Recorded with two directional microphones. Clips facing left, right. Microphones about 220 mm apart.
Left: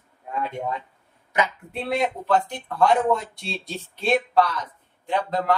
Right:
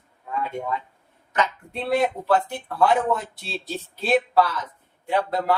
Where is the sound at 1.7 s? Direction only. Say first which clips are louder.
Right 3 dB; centre (ahead or behind).